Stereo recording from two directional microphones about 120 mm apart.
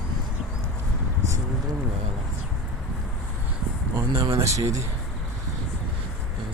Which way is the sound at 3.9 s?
25° right (ahead or behind).